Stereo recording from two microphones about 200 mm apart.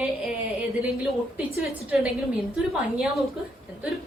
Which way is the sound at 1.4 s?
5° right (ahead or behind).